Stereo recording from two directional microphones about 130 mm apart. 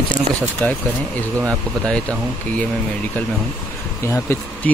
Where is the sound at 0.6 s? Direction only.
15° left (ahead or behind).